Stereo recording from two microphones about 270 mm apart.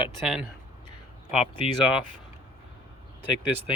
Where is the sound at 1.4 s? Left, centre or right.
Left.